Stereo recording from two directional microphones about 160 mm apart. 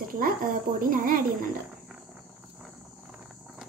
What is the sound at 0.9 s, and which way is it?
Speech, 60° right (ahead or behind).